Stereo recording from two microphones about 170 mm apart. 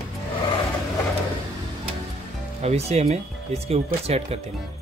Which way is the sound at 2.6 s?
40° right (ahead or behind).